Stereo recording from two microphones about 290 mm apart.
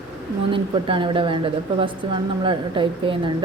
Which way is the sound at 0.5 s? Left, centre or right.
Centre.